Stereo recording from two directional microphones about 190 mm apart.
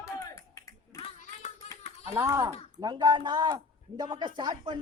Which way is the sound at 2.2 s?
15° right (ahead or behind).